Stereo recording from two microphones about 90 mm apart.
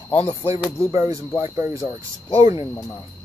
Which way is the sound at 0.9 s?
35° right (ahead or behind).